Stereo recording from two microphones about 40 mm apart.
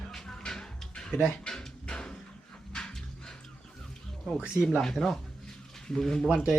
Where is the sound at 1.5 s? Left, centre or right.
Centre.